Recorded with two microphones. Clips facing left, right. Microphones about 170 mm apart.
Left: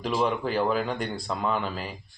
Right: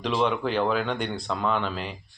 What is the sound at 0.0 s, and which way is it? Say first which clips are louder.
Speech: right 1 dB; 5° left (ahead or behind).